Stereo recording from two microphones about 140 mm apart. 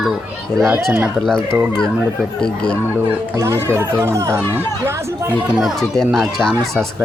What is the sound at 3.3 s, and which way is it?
Speech, 25° right (ahead or behind).